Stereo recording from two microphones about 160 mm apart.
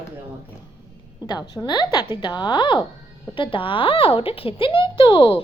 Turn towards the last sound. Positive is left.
turn(degrees=35)  # may be behind; listen again after turning